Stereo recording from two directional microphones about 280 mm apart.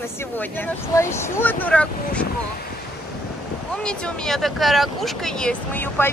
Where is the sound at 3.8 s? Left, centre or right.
Centre.